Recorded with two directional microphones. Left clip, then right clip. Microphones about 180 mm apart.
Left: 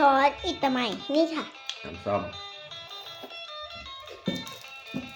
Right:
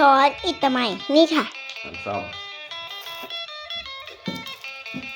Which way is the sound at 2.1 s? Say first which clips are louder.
Even; 35° left (ahead or behind).